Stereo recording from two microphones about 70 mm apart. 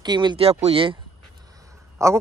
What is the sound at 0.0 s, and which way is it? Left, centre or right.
Speech, right.